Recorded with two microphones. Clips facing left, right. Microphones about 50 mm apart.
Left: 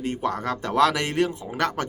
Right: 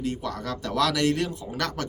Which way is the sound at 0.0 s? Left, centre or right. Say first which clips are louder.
Left 4 dB; left.